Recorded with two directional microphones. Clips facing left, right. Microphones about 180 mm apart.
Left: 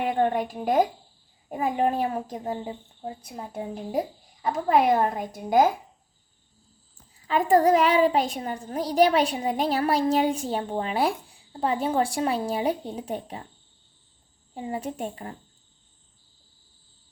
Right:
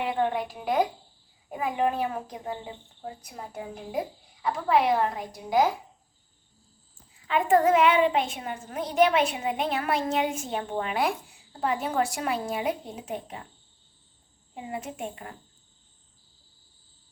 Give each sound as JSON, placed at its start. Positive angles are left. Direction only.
{"t": 0.0, "sound": "a woman's voice", "side_deg": 45}
{"t": 4.4, "sound": "a woman's voice", "side_deg": 45}
{"t": 7.3, "sound": "a child's voice", "side_deg": 40}
{"t": 14.5, "sound": "a child's voice", "side_deg": 35}